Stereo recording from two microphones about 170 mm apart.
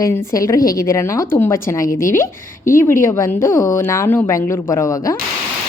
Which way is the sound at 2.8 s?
15° left (ahead or behind).